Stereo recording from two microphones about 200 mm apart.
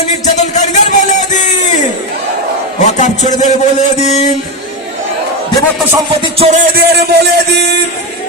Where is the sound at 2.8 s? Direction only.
35° left (ahead or behind).